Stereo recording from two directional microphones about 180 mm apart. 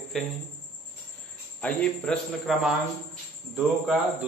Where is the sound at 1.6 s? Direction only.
5° left (ahead or behind).